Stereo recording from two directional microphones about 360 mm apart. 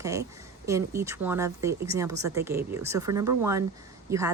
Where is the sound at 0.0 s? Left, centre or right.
Centre.